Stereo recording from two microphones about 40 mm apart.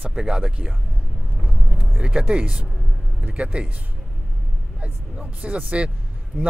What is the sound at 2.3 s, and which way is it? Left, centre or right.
Speech, right.